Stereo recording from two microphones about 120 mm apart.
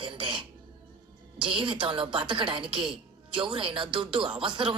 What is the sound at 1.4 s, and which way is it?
A woman's voice, 45° right (ahead or behind).